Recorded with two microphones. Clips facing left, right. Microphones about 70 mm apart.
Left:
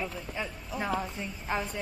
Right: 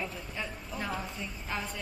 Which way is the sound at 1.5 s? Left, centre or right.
Left.